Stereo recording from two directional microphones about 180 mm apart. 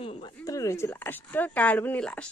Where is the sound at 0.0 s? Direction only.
30° left (ahead or behind).